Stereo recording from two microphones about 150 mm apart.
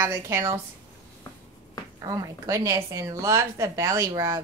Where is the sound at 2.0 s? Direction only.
25° right (ahead or behind).